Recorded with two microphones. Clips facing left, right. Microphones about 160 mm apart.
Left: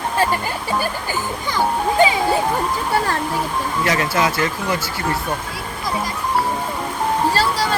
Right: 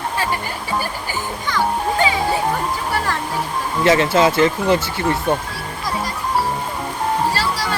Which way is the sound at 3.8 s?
25° right (ahead or behind).